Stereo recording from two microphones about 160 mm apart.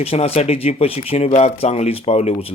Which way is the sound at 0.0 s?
40° left (ahead or behind).